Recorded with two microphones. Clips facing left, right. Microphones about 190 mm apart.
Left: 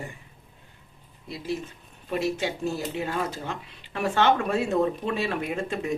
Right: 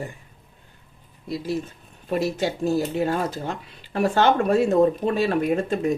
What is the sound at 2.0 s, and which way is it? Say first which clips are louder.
Speech: right 3 dB; 40° right (ahead or behind).